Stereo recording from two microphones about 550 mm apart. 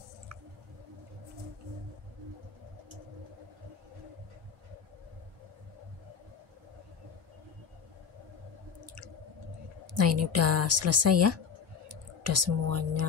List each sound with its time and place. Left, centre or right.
8.8 s drip: right
9.9 s a woman's voice: right
11.9 s a sound: right